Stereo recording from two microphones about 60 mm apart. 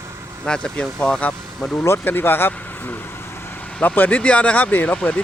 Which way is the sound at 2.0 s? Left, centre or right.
Left.